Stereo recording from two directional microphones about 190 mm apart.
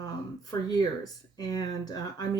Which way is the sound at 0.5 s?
15° left (ahead or behind).